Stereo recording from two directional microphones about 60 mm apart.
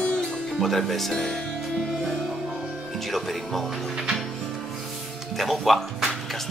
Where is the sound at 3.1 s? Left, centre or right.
Centre.